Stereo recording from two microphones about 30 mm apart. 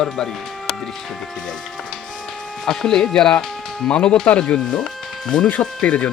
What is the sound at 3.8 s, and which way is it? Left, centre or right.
Speech, left.